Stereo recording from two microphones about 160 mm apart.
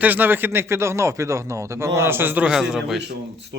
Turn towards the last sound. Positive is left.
turn(degrees=0)  # may be behind; listen again after turning